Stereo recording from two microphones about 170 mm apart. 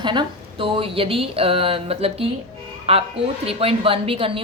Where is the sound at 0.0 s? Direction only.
25° right (ahead or behind).